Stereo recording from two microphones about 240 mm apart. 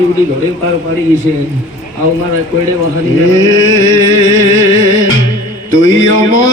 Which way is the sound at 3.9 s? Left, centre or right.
Left.